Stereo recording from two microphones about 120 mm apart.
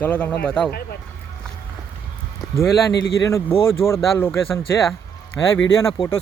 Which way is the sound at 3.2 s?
25° left (ahead or behind).